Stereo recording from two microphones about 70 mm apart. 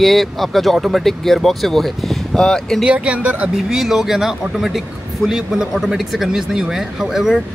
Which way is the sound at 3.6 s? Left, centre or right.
Centre.